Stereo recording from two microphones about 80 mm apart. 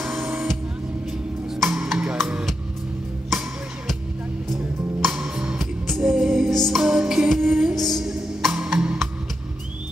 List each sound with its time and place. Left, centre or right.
0.2 s music: right
1.6 s music: centre
3.3 s music: centre
5.1 s music: centre
5.6 s music: centre